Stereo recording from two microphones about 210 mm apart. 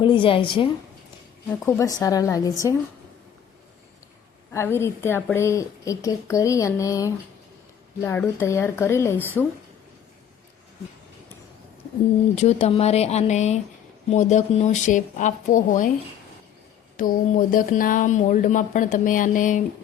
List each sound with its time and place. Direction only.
0.0 s a woman's voice: 25° left (ahead or behind)
4.5 s a woman's voice: 10° left (ahead or behind)
12.4 s speech: 30° left (ahead or behind)
17.0 s speech: 40° left (ahead or behind)